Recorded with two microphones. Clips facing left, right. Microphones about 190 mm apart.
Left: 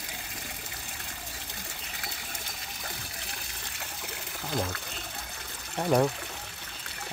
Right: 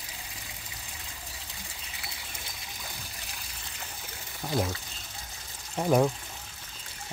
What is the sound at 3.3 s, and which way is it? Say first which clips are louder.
Water: left 2 dB; 70° left (ahead or behind).